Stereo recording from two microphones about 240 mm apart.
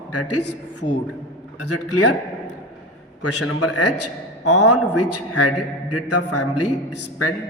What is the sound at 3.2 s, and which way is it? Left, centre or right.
A man's voice, left.